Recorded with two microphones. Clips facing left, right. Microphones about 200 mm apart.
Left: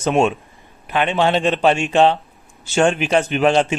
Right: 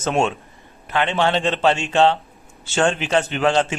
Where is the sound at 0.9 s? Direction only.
15° left (ahead or behind).